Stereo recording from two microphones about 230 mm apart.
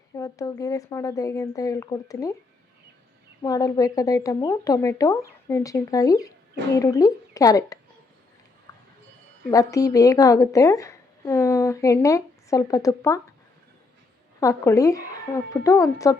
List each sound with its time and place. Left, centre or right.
0.2 s a woman's voice: centre
3.4 s a woman's voice: centre
9.5 s a woman's voice: centre
14.4 s a woman's voice: centre